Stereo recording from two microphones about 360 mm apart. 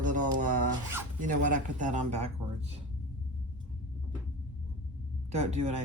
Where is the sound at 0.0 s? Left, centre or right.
Right.